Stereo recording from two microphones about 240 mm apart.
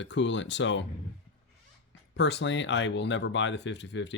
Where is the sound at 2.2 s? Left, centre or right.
Left.